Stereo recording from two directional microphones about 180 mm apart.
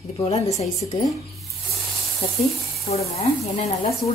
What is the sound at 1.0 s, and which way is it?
Speech, centre (ahead or behind).